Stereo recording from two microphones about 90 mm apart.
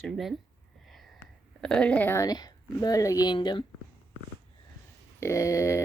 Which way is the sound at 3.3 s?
60° left (ahead or behind).